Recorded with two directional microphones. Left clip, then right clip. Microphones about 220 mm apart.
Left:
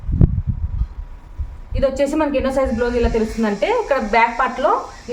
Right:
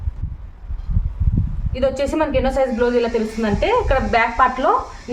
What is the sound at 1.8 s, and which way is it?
A woman's voice, 10° right (ahead or behind).